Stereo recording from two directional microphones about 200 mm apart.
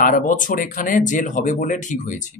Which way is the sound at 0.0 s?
40° left (ahead or behind).